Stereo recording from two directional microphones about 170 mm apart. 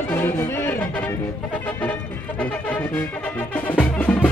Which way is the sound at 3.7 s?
10° left (ahead or behind).